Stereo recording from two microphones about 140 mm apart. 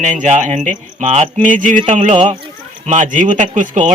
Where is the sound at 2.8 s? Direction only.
60° right (ahead or behind).